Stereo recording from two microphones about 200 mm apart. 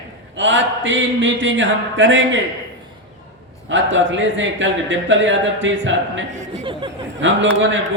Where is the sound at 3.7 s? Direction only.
70° right (ahead or behind).